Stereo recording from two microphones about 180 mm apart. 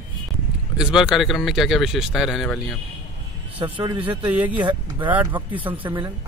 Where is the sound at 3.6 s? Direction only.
25° right (ahead or behind).